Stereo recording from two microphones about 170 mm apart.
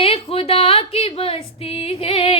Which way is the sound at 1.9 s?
35° left (ahead or behind).